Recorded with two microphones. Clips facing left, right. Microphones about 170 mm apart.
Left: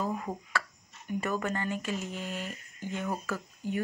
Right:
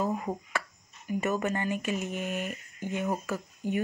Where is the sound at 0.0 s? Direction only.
20° right (ahead or behind).